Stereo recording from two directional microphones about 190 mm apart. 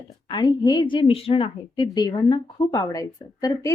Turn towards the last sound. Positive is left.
turn(degrees=20)  # may be behind; listen again after turning